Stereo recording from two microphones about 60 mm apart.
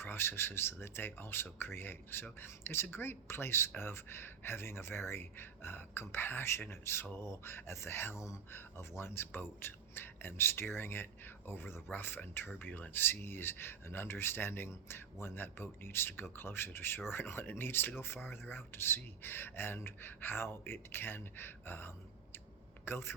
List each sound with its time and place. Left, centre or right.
0.0 s speech: left
9.0 s speech: left